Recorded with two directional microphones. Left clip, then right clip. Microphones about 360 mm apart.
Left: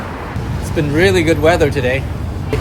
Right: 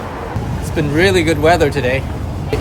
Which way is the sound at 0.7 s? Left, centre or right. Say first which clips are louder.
Even; centre.